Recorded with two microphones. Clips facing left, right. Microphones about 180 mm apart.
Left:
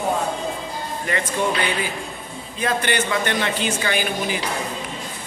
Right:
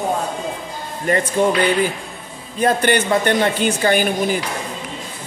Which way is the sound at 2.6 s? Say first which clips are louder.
Right 6 dB; 45° right (ahead or behind).